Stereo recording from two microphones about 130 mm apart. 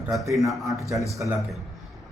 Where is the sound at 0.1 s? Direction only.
Centre (ahead or behind).